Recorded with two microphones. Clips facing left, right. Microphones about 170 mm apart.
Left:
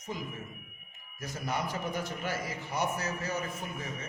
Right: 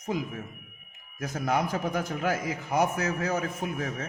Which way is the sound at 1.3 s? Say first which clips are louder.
Right 7 dB; 90° right.